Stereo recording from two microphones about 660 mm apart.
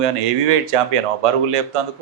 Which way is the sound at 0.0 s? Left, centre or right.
Right.